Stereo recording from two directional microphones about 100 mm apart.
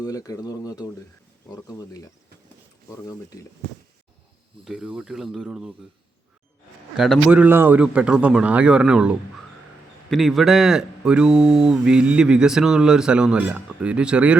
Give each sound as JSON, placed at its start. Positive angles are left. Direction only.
{"t": 0.0, "sound": "speech", "side_deg": 35}
{"t": 4.6, "sound": "speech", "side_deg": -5}
{"t": 6.9, "sound": "speech", "side_deg": 0}
{"t": 7.3, "sound": "speech", "side_deg": -15}